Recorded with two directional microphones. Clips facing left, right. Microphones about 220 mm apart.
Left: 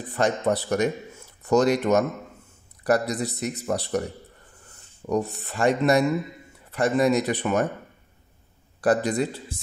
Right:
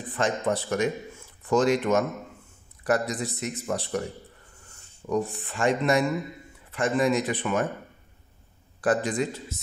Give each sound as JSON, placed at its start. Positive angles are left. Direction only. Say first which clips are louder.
{"t": 0.1, "sound": "speech", "louder": "left 3 dB", "side_deg": 40}
{"t": 5.1, "sound": "speech", "louder": "left 2 dB", "side_deg": 40}
{"t": 8.8, "sound": "speech", "louder": "left 3 dB", "side_deg": 40}